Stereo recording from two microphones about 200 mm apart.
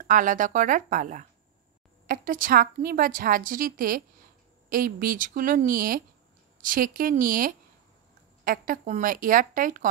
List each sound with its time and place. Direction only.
0.0 s a woman's voice: 40° right (ahead or behind)